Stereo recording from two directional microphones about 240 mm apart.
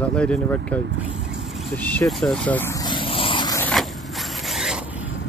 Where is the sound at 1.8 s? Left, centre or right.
Centre.